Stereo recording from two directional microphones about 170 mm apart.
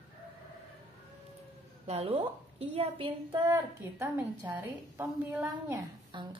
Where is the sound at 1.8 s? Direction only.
35° right (ahead or behind).